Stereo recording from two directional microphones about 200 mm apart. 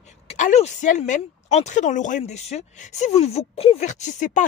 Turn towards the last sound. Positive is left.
turn(degrees=35)  # may be behind; listen again after turning